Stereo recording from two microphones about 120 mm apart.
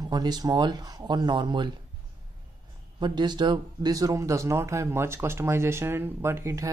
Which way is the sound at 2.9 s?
40° right (ahead or behind).